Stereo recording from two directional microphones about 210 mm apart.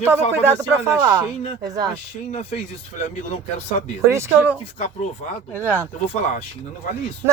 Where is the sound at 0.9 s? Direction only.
15° right (ahead or behind).